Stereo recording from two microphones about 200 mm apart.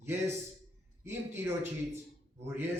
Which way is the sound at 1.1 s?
10° right (ahead or behind).